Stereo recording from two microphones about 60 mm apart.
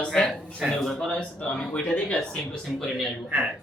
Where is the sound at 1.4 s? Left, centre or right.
Left.